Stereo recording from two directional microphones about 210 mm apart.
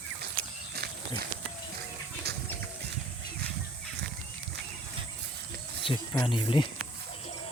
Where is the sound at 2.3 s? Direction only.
50° right (ahead or behind).